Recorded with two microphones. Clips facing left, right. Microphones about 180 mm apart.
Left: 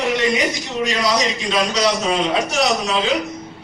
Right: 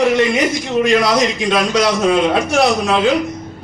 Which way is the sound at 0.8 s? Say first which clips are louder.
Right 5 dB; 55° right (ahead or behind).